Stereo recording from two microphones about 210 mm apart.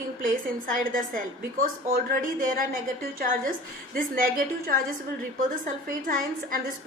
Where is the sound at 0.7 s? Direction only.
40° right (ahead or behind).